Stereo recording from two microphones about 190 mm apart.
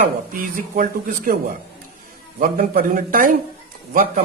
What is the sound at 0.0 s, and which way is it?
Speech, 45° right (ahead or behind).